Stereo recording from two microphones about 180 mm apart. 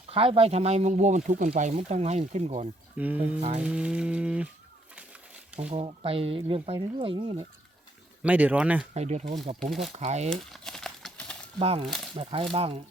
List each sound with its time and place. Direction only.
0.1 s speech: 30° right (ahead or behind)
3.0 s speech: 10° right (ahead or behind)
5.7 s speech: 35° right (ahead or behind)
8.2 s speech: 10° right (ahead or behind)
8.9 s speech: 40° right (ahead or behind)
9.6 s speech: centre (ahead or behind)
9.9 s speech: 35° right (ahead or behind)
10.2 s crumpling: 5° left (ahead or behind)
11.6 s speech: 35° right (ahead or behind)
11.9 s speech: centre (ahead or behind)
12.1 s speech: 30° right (ahead or behind)